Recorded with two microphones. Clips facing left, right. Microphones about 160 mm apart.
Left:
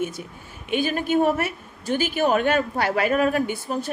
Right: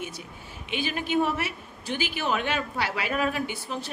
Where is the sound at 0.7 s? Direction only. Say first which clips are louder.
Left 6 dB; 45° left (ahead or behind).